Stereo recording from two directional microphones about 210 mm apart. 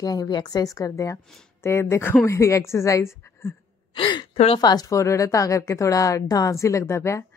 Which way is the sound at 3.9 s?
25° left (ahead or behind).